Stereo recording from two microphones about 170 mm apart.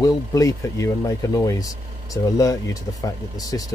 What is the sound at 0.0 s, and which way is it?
Speech, 20° left (ahead or behind).